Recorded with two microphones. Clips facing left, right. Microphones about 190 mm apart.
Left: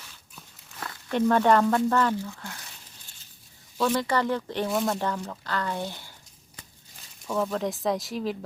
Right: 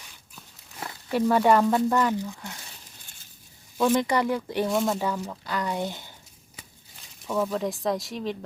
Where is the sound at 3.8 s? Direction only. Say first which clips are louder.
Right 2 dB; 15° right (ahead or behind).